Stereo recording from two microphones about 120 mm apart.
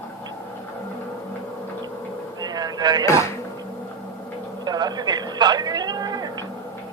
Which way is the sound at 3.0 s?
25° left (ahead or behind).